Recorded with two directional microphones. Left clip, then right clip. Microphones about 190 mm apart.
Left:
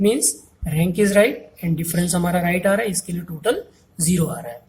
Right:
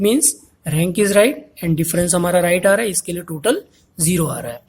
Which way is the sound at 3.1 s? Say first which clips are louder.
Right 3 dB; 35° right (ahead or behind).